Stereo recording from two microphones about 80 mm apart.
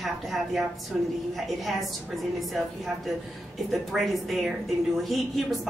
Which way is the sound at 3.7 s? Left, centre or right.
Centre.